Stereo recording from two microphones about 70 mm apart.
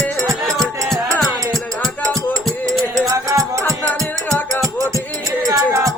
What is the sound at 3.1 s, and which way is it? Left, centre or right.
Music, right.